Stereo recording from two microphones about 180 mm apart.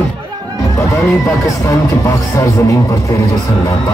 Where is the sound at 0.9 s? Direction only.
15° left (ahead or behind).